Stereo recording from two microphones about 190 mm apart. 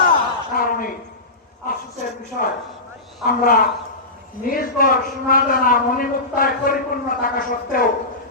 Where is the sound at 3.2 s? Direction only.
50° left (ahead or behind).